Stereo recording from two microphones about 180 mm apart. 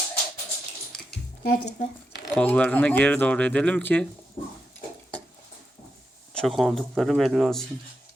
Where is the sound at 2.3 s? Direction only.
10° left (ahead or behind).